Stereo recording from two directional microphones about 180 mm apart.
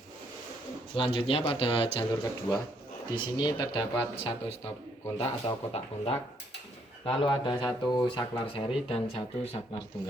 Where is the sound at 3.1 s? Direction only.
25° left (ahead or behind).